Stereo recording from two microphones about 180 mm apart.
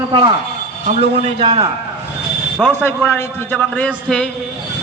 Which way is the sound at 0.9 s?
35° right (ahead or behind).